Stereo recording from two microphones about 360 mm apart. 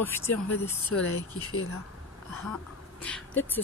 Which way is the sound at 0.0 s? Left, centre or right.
Centre.